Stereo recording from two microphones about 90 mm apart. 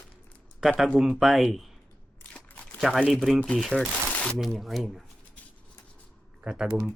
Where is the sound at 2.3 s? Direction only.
20° left (ahead or behind).